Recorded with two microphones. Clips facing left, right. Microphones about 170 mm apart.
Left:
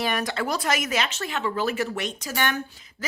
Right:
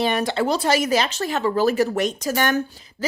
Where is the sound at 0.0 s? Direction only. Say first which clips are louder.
Right 6 dB; 25° right (ahead or behind).